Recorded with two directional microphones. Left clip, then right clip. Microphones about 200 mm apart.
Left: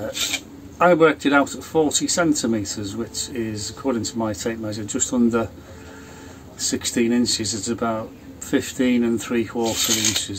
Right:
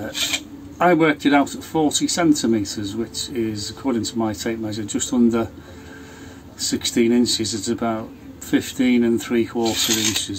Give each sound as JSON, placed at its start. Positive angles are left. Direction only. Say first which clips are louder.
{"t": 0.1, "sound": "filing", "louder": "right 4 dB", "side_deg": -20}
{"t": 0.7, "sound": "speech", "louder": "left 1 dB", "side_deg": 0}
{"t": 6.6, "sound": "speech", "louder": "right 2 dB", "side_deg": 0}
{"t": 9.6, "sound": "filing", "louder": "even", "side_deg": -20}